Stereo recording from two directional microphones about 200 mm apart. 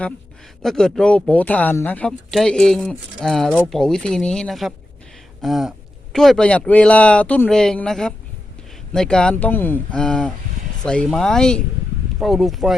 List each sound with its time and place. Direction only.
0.6 s speech: centre (ahead or behind)
5.4 s a sound: centre (ahead or behind)
6.1 s speech: centre (ahead or behind)